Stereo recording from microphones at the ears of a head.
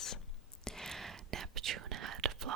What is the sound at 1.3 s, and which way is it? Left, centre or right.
Whispering, right.